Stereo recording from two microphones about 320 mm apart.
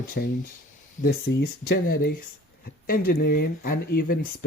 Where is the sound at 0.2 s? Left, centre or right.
Left.